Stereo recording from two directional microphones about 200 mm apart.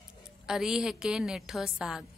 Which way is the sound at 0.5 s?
5° right (ahead or behind).